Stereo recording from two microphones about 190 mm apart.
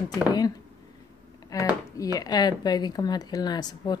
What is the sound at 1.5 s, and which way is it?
A woman's voice, 20° left (ahead or behind).